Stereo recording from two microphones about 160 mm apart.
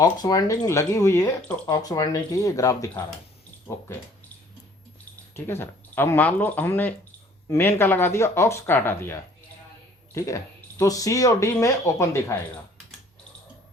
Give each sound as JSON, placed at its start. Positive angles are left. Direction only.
{"t": 0.0, "sound": "speech", "side_deg": 25}
{"t": 5.5, "sound": "speech", "side_deg": 15}
{"t": 10.2, "sound": "speech", "side_deg": 20}